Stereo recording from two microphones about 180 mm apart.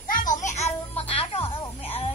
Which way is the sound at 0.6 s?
35° left (ahead or behind).